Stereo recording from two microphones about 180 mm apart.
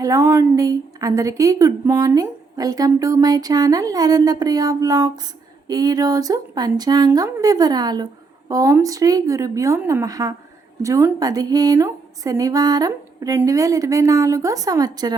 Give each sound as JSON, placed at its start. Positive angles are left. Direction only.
{"t": 0.0, "sound": "a woman's voice", "side_deg": -20}